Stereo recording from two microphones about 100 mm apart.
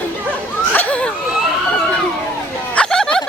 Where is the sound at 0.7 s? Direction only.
15° left (ahead or behind).